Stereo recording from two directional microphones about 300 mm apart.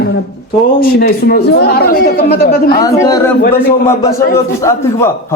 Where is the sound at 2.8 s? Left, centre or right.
Centre.